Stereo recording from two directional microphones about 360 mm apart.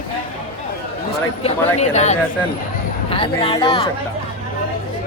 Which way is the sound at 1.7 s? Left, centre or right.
Centre.